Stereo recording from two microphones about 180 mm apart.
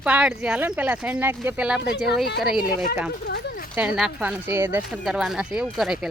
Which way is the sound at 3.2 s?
60° left (ahead or behind).